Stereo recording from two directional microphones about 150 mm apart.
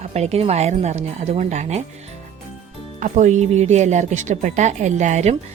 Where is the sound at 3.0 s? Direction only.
55° right (ahead or behind).